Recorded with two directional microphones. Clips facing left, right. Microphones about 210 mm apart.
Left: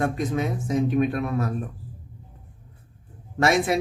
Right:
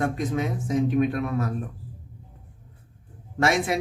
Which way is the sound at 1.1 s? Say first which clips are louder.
Left 1 dB; 40° left (ahead or behind).